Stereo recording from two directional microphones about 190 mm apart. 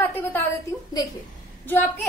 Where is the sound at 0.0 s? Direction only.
10° left (ahead or behind).